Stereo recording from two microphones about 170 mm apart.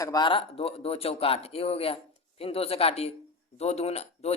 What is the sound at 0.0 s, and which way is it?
A man's voice, 25° left (ahead or behind).